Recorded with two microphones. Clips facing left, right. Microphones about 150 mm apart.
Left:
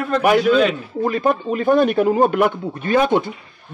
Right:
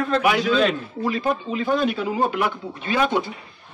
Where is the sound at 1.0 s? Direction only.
50° left (ahead or behind).